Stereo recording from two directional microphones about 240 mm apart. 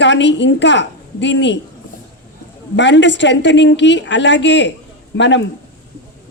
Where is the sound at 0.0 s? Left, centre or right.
Left.